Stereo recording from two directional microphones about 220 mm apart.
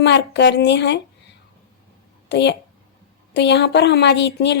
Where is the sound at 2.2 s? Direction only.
50° left (ahead or behind).